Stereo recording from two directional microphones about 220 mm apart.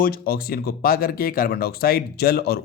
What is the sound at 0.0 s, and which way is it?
Speech, 40° left (ahead or behind).